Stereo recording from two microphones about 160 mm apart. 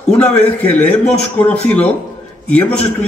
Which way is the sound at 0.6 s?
10° left (ahead or behind).